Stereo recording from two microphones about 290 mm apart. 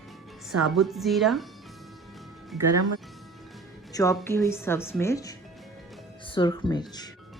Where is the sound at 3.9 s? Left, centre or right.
Centre.